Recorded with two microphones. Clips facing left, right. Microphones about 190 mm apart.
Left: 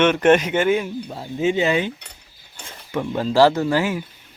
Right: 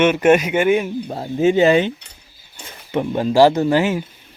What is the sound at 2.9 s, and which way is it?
Speech, 20° right (ahead or behind).